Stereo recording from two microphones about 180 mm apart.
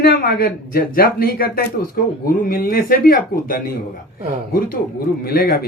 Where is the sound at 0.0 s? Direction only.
55° left (ahead or behind).